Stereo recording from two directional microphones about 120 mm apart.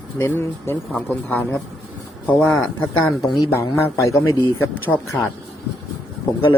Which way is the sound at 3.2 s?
30° left (ahead or behind).